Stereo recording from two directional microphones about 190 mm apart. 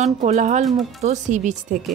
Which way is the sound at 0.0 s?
40° right (ahead or behind).